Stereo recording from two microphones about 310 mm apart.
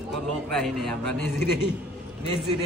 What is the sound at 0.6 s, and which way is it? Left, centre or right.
Speech, centre.